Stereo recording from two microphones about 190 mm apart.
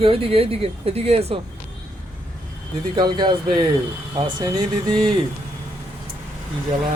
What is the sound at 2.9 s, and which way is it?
Speech, 25° right (ahead or behind).